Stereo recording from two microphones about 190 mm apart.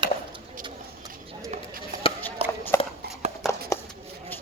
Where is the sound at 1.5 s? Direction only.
50° right (ahead or behind).